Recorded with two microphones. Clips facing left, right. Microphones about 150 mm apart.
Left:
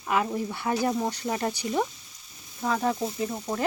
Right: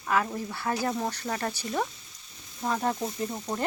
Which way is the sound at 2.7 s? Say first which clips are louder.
Left 2 dB; centre (ahead or behind).